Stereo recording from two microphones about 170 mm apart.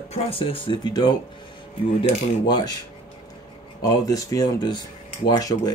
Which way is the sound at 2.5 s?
25° left (ahead or behind).